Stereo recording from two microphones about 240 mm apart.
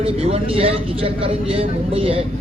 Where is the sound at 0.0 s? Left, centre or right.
Right.